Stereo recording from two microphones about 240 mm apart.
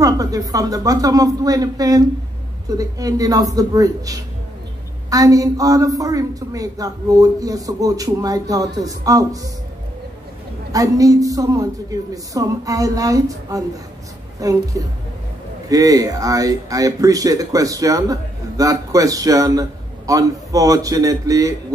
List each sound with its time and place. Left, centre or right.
0.0 s speech: centre
10.7 s speech: centre